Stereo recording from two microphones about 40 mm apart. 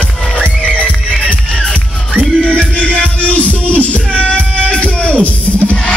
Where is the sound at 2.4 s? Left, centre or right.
Left.